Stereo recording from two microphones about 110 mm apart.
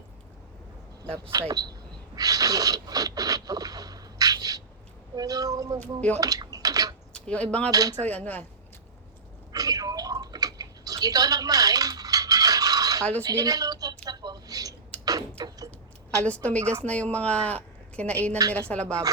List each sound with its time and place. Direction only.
1.3 s speech: 35° right (ahead or behind)
2.1 s a sound: 35° right (ahead or behind)
5.1 s speech: 35° right (ahead or behind)
5.8 s speech: 15° left (ahead or behind)
6.1 s a sound: 35° right (ahead or behind)
7.1 s speech: 10° left (ahead or behind)
7.7 s speech: 35° right (ahead or behind)
8.0 s speech: 15° left (ahead or behind)
9.5 s a sound: 35° right (ahead or behind)
13.2 s a woman's voice: 35° right (ahead or behind)
14.0 s a sound: 35° right (ahead or behind)
16.2 s speech: 10° left (ahead or behind)